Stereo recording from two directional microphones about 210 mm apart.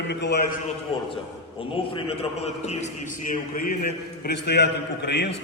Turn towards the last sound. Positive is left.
turn(degrees=55)  # may be behind; listen again after turning